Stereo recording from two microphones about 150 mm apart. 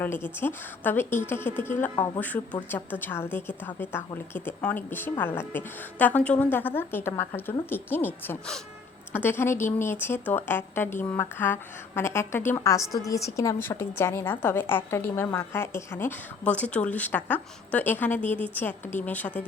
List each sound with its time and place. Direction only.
0.0 s a woman's voice: 15° left (ahead or behind)